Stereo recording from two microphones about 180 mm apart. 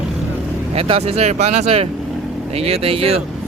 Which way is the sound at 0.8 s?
35° right (ahead or behind).